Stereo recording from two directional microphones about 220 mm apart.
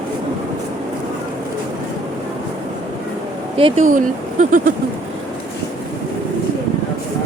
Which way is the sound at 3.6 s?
35° right (ahead or behind).